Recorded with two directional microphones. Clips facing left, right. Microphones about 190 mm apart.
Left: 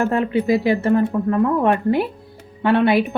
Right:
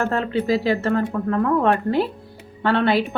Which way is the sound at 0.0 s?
15° left (ahead or behind).